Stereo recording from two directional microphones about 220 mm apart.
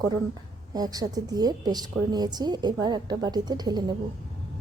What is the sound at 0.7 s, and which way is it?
A woman's voice, 15° right (ahead or behind).